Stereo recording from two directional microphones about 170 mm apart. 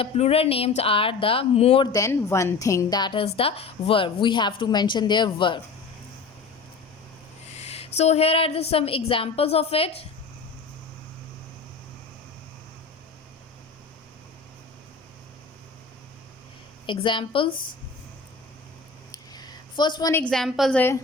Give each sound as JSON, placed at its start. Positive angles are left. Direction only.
{"t": 0.0, "sound": "a woman's voice", "side_deg": 35}
{"t": 1.9, "sound": "a woman's voice", "side_deg": 20}
{"t": 7.5, "sound": "a woman's voice", "side_deg": 40}
{"t": 16.8, "sound": "a woman's voice", "side_deg": 30}
{"t": 19.1, "sound": "a sound", "side_deg": 25}
{"t": 20.2, "sound": "a woman's voice", "side_deg": 0}